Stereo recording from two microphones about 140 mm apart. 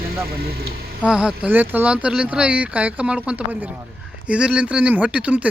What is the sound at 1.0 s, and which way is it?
Speech, 5° right (ahead or behind).